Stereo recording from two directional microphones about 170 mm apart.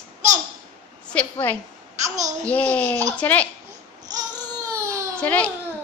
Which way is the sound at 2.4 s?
10° left (ahead or behind).